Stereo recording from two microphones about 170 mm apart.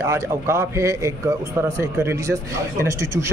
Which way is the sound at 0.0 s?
15° right (ahead or behind).